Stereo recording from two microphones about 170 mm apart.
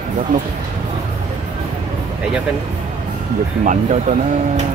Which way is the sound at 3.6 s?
50° right (ahead or behind).